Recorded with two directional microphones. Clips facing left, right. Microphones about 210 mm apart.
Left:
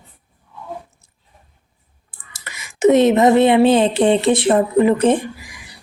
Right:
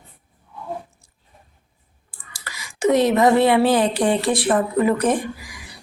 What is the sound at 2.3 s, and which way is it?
A woman's voice, 25° left (ahead or behind).